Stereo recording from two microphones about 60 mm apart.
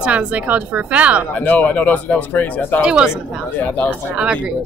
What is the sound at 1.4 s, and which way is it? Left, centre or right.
Speech, left.